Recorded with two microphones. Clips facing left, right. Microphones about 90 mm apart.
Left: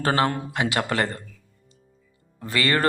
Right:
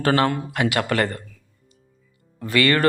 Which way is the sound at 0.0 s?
20° left (ahead or behind).